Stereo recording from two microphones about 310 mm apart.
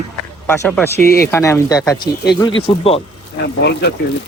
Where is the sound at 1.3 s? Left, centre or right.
Centre.